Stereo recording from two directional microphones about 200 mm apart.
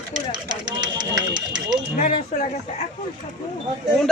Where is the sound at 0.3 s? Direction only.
20° right (ahead or behind).